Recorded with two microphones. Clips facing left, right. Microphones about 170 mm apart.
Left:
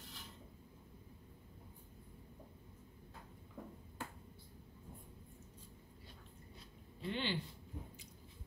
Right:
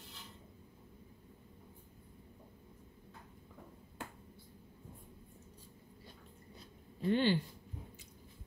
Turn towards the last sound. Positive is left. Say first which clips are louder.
# right 10 dB
turn(degrees=-45)  # may be behind; listen again after turning